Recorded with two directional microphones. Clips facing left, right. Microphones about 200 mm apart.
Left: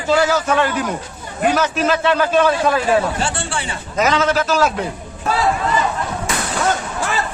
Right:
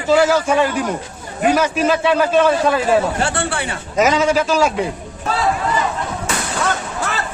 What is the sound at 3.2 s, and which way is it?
Speech, 60° right (ahead or behind).